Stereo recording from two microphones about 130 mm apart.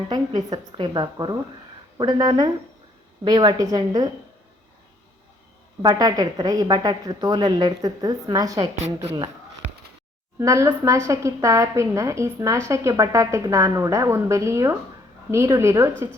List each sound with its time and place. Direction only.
0.1 s a woman's voice: 30° right (ahead or behind)
5.8 s a woman's voice: 30° right (ahead or behind)
8.8 s speech: 55° right (ahead or behind)
10.4 s a woman's voice: 25° right (ahead or behind)